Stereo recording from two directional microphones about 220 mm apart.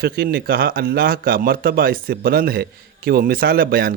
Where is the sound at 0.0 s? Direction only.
45° right (ahead or behind).